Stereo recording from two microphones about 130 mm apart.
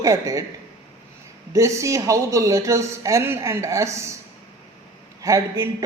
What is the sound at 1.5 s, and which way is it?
A woman's voice, 25° right (ahead or behind).